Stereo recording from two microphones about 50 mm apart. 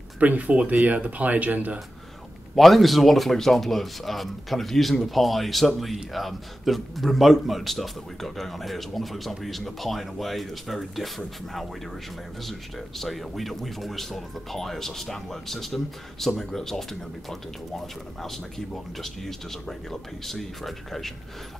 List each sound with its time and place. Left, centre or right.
0.2 s speech: right
2.5 s a man's voice: centre